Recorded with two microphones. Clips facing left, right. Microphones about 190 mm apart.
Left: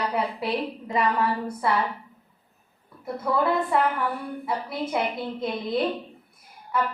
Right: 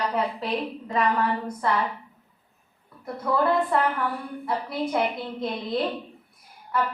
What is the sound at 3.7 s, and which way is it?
Speech, 5° left (ahead or behind).